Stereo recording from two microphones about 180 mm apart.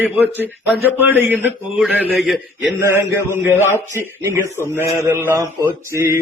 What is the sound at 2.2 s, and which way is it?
Speech, centre (ahead or behind).